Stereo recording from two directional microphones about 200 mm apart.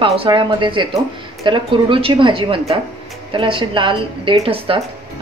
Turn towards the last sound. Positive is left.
turn(degrees=-30)  # may be behind; listen again after turning